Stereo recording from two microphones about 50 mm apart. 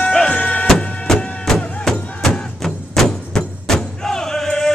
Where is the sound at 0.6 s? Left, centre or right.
Centre.